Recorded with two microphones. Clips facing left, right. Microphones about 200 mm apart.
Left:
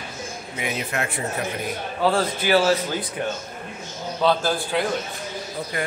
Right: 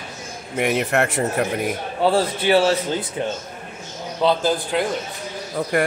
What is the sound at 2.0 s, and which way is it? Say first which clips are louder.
A man's voice: right 3 dB; 30° right (ahead or behind).